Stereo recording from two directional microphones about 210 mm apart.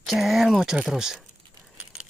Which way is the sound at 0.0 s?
Centre (ahead or behind).